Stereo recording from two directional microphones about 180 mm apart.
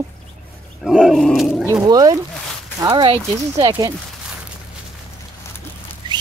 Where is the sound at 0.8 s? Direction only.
5° right (ahead or behind).